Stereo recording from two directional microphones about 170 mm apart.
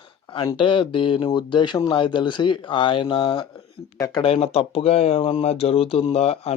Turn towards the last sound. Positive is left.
turn(degrees=35)  # may be behind; listen again after turning